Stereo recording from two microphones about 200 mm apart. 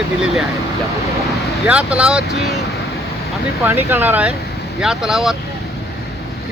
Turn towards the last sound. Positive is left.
turn(degrees=0)  # may be behind; listen again after turning